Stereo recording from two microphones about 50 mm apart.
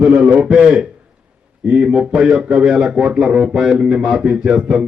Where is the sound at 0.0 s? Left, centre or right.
Centre.